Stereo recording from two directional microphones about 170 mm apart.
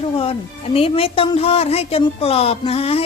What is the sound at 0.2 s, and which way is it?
A woman's voice, 35° left (ahead or behind).